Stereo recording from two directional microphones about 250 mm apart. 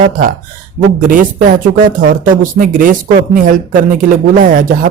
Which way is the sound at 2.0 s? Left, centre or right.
Right.